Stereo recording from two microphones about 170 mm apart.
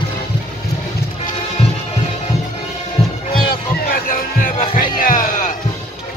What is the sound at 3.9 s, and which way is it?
Music, 55° left (ahead or behind).